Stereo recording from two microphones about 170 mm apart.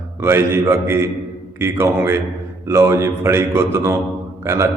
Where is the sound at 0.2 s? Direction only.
15° right (ahead or behind).